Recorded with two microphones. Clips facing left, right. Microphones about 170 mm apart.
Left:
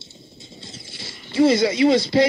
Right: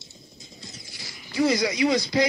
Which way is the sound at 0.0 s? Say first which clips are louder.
Left 4 dB; 30° left (ahead or behind).